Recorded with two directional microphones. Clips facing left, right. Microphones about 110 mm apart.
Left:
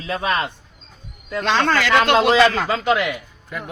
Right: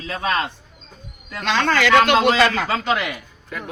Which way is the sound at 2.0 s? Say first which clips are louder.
Left 2 dB; 25° left (ahead or behind).